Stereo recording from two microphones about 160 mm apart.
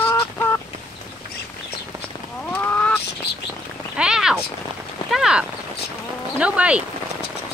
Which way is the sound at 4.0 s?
5° right (ahead or behind).